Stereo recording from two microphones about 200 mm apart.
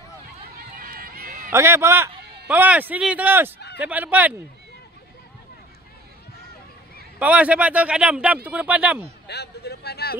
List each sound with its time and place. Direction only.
0.7 s run: 45° right (ahead or behind)
1.5 s a man's voice: 15° right (ahead or behind)
7.2 s a man's voice: 5° right (ahead or behind)
9.3 s speech: 55° left (ahead or behind)